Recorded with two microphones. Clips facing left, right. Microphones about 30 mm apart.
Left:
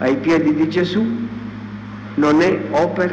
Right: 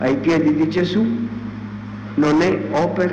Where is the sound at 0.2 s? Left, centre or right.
Centre.